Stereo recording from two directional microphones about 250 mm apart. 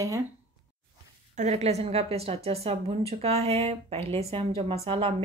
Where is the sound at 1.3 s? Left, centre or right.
Right.